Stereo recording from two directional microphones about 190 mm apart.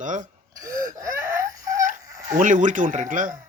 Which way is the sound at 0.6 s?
15° right (ahead or behind).